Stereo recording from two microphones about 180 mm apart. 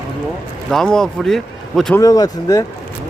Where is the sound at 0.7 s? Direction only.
Centre (ahead or behind).